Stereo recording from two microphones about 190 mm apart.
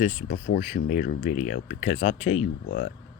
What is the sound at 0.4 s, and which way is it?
Speech, 55° left (ahead or behind).